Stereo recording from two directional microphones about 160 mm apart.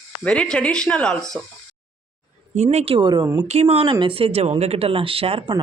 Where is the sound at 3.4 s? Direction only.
40° right (ahead or behind).